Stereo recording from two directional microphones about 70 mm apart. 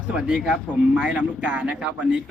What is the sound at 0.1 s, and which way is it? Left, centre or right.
Speech, centre.